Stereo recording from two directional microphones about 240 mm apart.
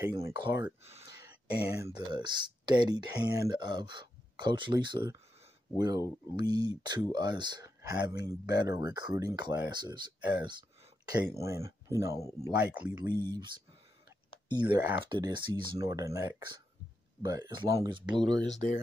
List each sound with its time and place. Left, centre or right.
0.0 s speech: centre
0.8 s speech: right
1.6 s speech: centre
2.0 s speech: centre
12.2 s speech: centre
12.4 s speech: centre
13.1 s speech: centre
14.5 s speech: centre
18.2 s speech: centre